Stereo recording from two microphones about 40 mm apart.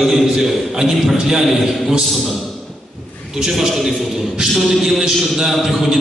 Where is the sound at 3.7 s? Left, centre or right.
Centre.